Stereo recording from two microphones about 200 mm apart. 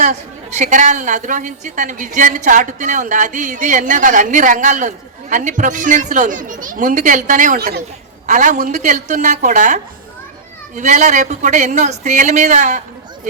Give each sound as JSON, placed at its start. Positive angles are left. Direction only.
{"t": 0.0, "sound": "a woman's voice", "side_deg": -35}